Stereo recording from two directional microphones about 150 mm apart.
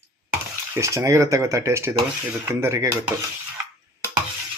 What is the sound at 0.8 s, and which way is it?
Speech, 20° right (ahead or behind).